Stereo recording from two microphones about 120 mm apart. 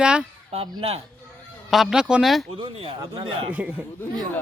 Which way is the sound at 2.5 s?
50° right (ahead or behind).